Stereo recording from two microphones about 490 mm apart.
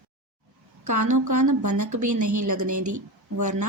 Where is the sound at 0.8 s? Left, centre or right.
Right.